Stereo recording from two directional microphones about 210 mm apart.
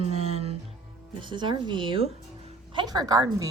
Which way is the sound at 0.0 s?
30° right (ahead or behind).